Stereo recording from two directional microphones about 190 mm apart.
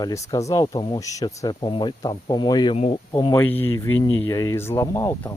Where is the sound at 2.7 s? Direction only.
35° left (ahead or behind).